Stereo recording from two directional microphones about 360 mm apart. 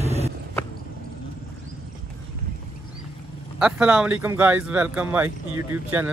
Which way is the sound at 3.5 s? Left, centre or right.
Centre.